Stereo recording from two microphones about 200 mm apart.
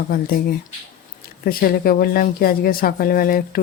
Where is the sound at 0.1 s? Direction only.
45° left (ahead or behind).